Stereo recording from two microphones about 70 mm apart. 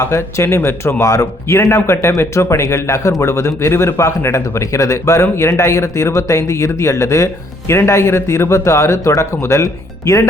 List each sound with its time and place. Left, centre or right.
0.0 s speech: left
7.7 s speech: left